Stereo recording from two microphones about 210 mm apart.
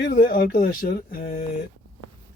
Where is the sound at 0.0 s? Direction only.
45° left (ahead or behind).